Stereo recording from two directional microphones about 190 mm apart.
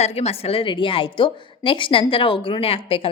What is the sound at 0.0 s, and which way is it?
A woman's voice, 35° left (ahead or behind).